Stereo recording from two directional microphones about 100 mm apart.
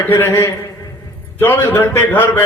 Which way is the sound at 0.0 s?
25° left (ahead or behind).